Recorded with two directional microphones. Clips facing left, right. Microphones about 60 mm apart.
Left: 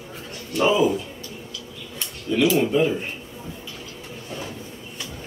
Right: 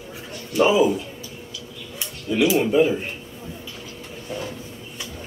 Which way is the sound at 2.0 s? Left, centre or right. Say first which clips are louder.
Even; centre.